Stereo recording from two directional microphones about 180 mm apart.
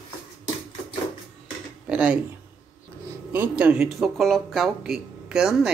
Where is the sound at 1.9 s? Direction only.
5° right (ahead or behind).